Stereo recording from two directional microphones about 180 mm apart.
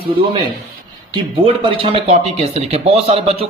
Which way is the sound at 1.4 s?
30° right (ahead or behind).